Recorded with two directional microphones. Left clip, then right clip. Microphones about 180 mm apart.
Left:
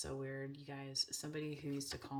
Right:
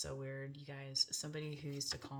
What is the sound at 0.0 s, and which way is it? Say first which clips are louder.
Speech: left 1 dB; 30° left (ahead or behind).